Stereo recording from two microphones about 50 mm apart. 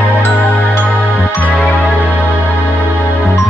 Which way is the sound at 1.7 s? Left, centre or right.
Left.